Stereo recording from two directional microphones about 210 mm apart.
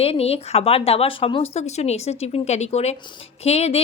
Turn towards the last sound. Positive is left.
turn(degrees=30)  # may be behind; listen again after turning